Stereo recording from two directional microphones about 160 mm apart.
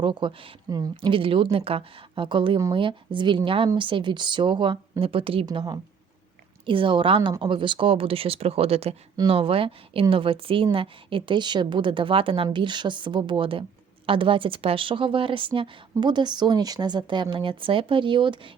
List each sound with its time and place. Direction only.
0.0 s a woman's voice: 30° right (ahead or behind)
5.5 s a woman's voice: 25° right (ahead or behind)